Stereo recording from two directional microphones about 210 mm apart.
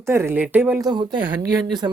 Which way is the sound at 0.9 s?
20° right (ahead or behind).